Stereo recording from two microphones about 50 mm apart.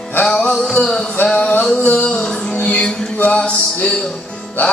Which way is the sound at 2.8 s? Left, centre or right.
Centre.